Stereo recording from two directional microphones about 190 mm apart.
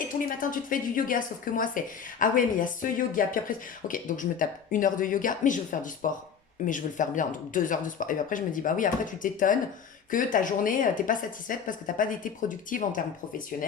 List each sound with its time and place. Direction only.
0.1 s speech: 45° left (ahead or behind)